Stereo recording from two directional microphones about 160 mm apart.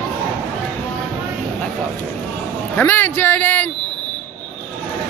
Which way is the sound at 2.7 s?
10° left (ahead or behind).